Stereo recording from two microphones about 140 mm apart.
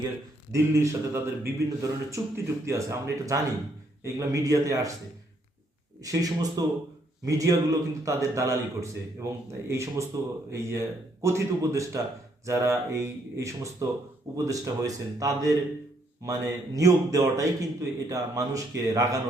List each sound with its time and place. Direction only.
0.5 s a man's voice: 20° right (ahead or behind)
6.0 s a man's voice: 25° right (ahead or behind)